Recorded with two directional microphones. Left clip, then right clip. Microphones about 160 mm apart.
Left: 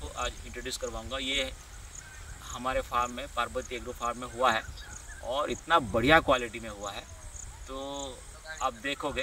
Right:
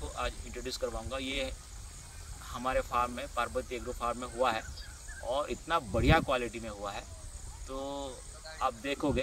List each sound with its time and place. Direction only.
0.0 s speech: 5° left (ahead or behind)
2.5 s speech: 5° left (ahead or behind)